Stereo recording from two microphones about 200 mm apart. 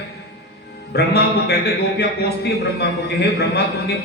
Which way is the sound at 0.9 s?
55° left (ahead or behind).